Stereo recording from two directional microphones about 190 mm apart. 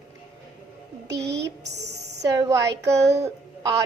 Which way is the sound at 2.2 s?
20° right (ahead or behind).